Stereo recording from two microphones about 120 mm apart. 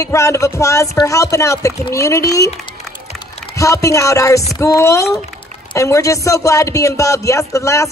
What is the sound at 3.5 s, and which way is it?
Speech, 25° left (ahead or behind).